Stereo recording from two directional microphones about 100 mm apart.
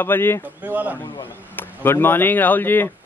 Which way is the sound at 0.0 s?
20° left (ahead or behind).